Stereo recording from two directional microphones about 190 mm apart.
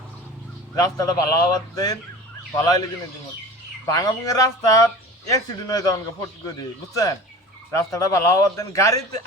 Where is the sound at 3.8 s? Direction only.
20° left (ahead or behind).